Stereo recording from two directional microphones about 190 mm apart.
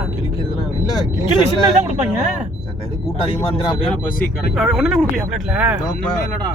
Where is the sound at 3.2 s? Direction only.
30° left (ahead or behind).